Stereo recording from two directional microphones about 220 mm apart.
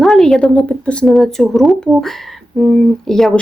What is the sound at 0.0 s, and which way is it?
Speech, centre (ahead or behind).